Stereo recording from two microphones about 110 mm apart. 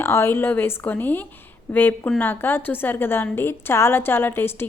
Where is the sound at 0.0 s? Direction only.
20° left (ahead or behind).